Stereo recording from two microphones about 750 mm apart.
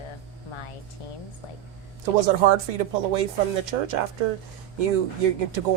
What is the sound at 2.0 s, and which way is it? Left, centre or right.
Speech, right.